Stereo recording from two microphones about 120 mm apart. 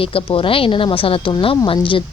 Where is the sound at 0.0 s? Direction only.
50° left (ahead or behind).